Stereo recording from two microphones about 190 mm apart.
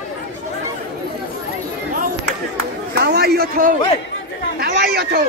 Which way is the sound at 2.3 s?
55° right (ahead or behind).